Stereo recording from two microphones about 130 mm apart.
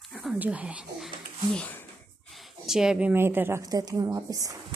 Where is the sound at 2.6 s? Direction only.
5° right (ahead or behind); by 4.5 s 25° right (ahead or behind).